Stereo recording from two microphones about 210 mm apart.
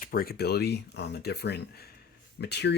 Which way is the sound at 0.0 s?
45° left (ahead or behind).